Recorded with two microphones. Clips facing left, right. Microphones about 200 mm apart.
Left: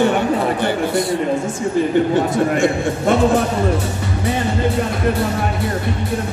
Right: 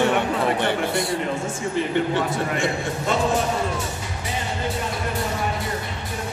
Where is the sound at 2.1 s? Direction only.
45° left (ahead or behind).